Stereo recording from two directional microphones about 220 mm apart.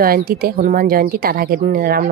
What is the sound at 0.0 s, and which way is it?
A woman's voice, 40° right (ahead or behind).